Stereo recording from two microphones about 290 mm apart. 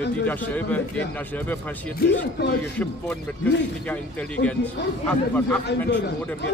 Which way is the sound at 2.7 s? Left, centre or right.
Centre.